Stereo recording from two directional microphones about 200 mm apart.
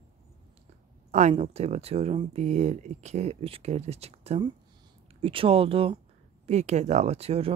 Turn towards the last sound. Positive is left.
turn(degrees=-30)  # may be behind; listen again after turning